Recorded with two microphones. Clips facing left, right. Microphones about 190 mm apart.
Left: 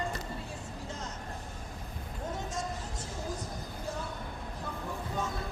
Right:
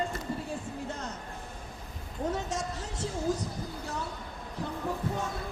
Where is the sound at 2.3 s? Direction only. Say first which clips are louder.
Right 4 dB; 75° right (ahead or behind).